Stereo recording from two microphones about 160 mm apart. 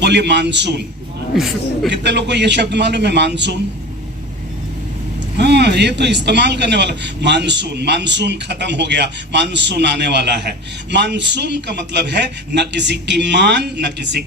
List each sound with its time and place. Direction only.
0.0 s a man's voice: 90° right
1.9 s a man's voice: 90° right
5.4 s a man's voice: 90° right